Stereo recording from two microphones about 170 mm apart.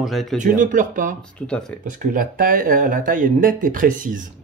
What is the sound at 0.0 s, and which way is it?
Speech, centre (ahead or behind).